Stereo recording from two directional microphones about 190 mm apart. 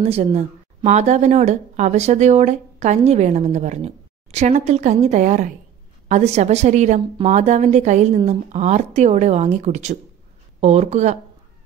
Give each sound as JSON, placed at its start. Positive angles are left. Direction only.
{"t": 0.0, "sound": "a woman's voice", "side_deg": -30}